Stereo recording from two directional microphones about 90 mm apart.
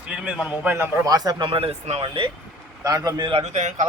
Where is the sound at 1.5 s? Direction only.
90° right.